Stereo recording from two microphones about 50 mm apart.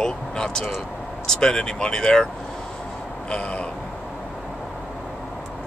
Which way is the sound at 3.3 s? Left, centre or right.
Left.